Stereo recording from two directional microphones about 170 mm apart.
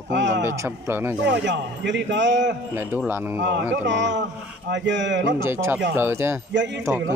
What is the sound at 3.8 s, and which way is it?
A man's voice, 90° right.